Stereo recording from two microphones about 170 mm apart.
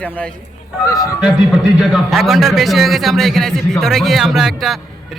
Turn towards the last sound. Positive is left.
turn(degrees=0)  # may be behind; listen again after turning